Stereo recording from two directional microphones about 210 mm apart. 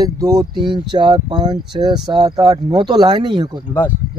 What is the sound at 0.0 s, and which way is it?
Speech, 15° right (ahead or behind).